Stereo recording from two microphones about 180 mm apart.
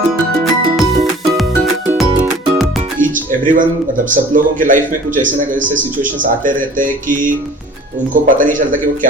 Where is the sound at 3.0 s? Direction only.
45° right (ahead or behind).